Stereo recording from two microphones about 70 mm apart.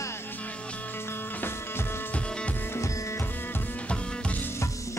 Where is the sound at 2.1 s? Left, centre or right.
Centre.